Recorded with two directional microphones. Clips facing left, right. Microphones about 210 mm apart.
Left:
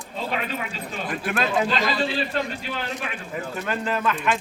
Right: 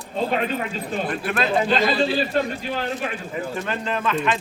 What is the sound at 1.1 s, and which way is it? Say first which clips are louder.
Speech: even; centre (ahead or behind).